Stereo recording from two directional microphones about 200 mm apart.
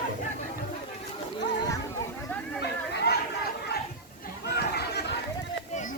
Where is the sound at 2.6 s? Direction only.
55° left (ahead or behind).